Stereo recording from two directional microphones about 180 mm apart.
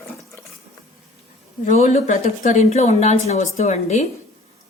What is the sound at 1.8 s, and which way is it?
Speech, 40° left (ahead or behind).